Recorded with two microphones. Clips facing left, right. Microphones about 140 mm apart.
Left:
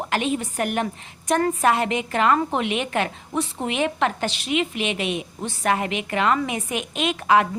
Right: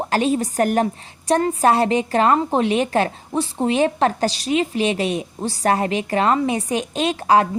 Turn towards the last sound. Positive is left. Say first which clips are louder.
# right 3 dB
turn(degrees=-35)  # may be behind; listen again after turning